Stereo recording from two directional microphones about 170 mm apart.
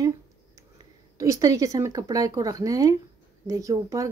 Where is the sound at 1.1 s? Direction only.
20° right (ahead or behind).